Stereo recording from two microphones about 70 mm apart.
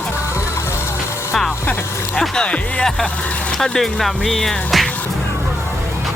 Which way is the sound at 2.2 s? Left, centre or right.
Centre.